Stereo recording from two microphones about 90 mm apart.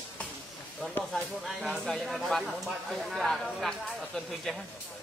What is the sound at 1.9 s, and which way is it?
Speech, centre (ahead or behind).